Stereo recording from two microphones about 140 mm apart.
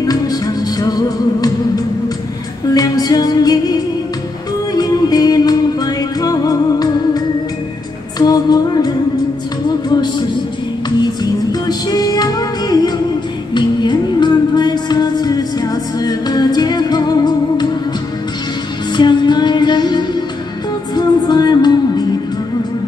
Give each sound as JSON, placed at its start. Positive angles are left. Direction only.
{"t": 0.0, "sound": "music", "side_deg": 25}
{"t": 2.7, "sound": "music", "side_deg": 30}
{"t": 11.6, "sound": "music", "side_deg": 30}
{"t": 18.9, "sound": "music", "side_deg": 30}